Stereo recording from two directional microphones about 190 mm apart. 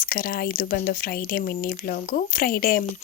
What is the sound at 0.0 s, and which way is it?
Speech, 50° left (ahead or behind).